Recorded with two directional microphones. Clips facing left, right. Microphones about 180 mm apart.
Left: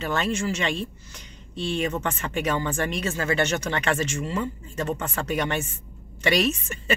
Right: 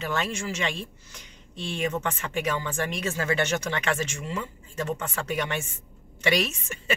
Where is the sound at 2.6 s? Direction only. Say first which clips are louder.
Left 3 dB; 40° left (ahead or behind).